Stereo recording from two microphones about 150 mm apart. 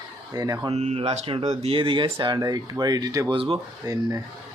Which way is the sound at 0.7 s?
45° right (ahead or behind).